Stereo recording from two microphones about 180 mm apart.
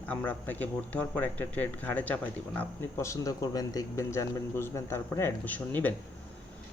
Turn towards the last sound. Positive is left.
turn(degrees=10)  # may be behind; listen again after turning